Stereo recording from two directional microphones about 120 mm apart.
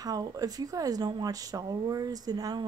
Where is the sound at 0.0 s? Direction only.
30° right (ahead or behind).